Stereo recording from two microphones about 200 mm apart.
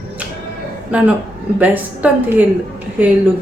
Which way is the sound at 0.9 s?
5° right (ahead or behind).